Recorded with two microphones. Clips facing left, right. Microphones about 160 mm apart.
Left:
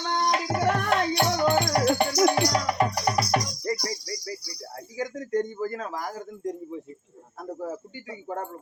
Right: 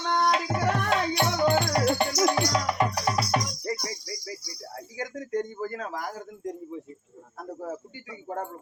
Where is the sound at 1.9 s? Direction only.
60° left (ahead or behind).